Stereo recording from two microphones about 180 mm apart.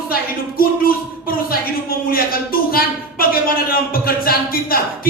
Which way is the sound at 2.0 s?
55° left (ahead or behind).